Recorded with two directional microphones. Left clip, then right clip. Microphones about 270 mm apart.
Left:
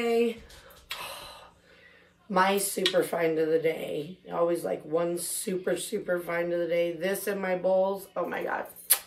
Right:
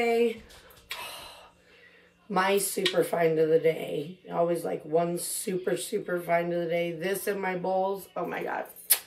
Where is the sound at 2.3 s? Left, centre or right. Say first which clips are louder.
Left 1 dB; centre.